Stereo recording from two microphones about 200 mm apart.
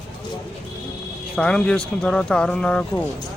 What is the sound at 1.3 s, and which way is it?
Speech, 5° left (ahead or behind).